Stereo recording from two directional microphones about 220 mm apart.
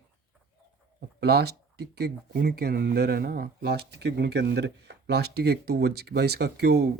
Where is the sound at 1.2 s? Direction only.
45° right (ahead or behind).